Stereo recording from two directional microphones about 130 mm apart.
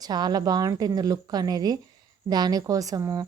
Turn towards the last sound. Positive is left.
turn(degrees=-25)  # may be behind; listen again after turning